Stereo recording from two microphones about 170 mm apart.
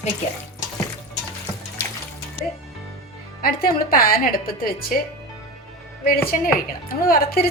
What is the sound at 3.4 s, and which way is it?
Speech, 60° left (ahead or behind).